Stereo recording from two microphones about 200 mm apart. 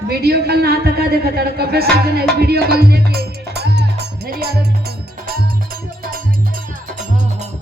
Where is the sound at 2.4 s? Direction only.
50° right (ahead or behind).